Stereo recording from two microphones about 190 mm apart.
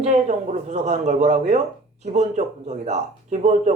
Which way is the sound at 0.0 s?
35° right (ahead or behind).